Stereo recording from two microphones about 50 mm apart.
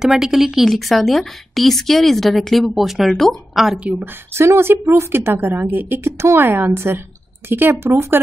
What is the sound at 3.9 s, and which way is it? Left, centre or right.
Speech, right.